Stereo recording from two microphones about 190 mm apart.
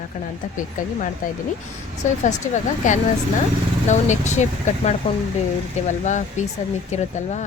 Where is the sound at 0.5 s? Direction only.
45° left (ahead or behind).